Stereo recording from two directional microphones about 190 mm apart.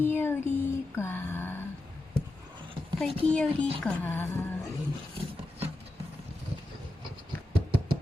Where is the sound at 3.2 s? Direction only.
5° left (ahead or behind).